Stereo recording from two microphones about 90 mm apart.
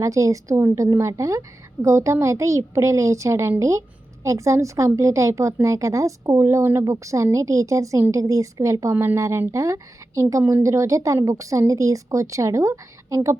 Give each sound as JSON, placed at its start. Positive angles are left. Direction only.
{"t": 0.0, "sound": "a woman's voice", "side_deg": -35}